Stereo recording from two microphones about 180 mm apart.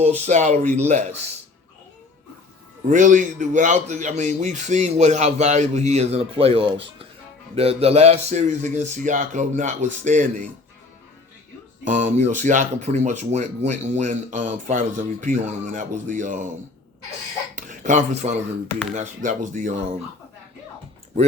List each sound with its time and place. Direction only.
0.3 s speech: 40° right (ahead or behind)
2.9 s speech: 45° right (ahead or behind)
11.9 s speech: 45° right (ahead or behind)
17.5 s speech: 45° right (ahead or behind)